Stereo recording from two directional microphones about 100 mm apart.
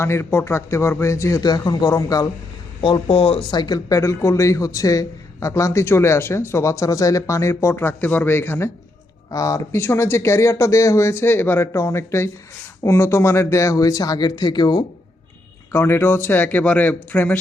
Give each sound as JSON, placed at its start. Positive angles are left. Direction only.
{"t": 0.0, "sound": "speech", "side_deg": 25}
{"t": 1.4, "sound": "a man's voice", "side_deg": 45}
{"t": 2.8, "sound": "speech", "side_deg": 65}
{"t": 3.5, "sound": "speech", "side_deg": 50}
{"t": 3.8, "sound": "a man's voice", "side_deg": 30}
{"t": 9.3, "sound": "a man's voice", "side_deg": 35}
{"t": 9.7, "sound": "a man's voice", "side_deg": 25}
{"t": 15.7, "sound": "speech", "side_deg": 25}